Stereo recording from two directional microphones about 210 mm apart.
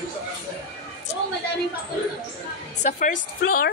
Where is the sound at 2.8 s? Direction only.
40° left (ahead or behind).